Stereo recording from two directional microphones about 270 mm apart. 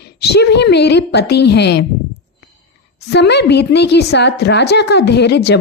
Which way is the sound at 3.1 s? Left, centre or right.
Left.